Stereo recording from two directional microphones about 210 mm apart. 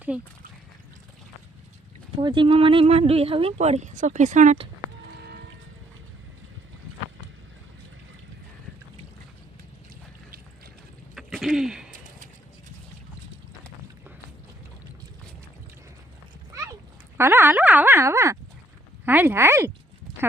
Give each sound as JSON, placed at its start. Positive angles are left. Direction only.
{"t": 0.1, "sound": "speech", "side_deg": -5}
{"t": 2.1, "sound": "speech", "side_deg": -25}
{"t": 11.1, "sound": "throat clearing", "side_deg": 0}
{"t": 11.9, "sound": "a sound", "side_deg": -40}
{"t": 17.2, "sound": "a sound", "side_deg": -10}
{"t": 19.0, "sound": "speech", "side_deg": -10}